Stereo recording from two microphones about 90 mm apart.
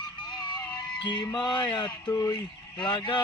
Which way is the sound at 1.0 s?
55° left (ahead or behind).